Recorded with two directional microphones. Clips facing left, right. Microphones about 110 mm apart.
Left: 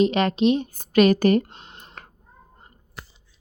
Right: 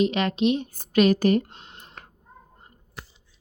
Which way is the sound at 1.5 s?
30° left (ahead or behind).